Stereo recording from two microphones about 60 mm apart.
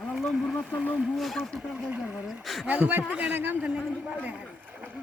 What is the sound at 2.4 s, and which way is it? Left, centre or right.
Speech, centre.